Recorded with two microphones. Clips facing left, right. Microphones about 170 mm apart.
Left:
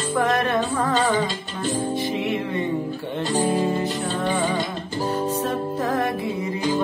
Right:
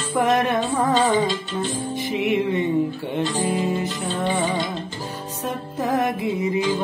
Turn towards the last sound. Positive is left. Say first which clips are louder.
# right 2 dB
turn(degrees=-20)  # may be behind; listen again after turning